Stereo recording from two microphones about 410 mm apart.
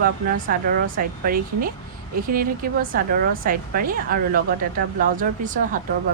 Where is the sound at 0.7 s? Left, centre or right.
Right.